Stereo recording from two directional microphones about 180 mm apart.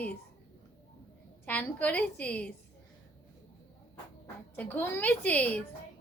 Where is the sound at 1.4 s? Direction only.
10° left (ahead or behind).